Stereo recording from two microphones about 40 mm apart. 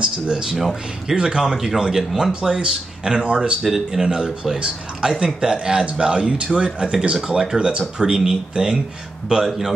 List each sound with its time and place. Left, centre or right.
0.0 s speech: right
0.6 s speech: centre
1.1 s speech: right
1.5 s speech: centre; by 3.5 s right
3.6 s speech: centre